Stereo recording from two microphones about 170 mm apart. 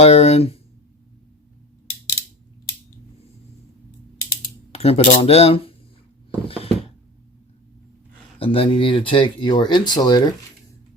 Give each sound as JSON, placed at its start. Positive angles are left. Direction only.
{"t": 0.0, "sound": "speech", "side_deg": 35}
{"t": 4.7, "sound": "speech", "side_deg": 35}
{"t": 8.4, "sound": "speech", "side_deg": 30}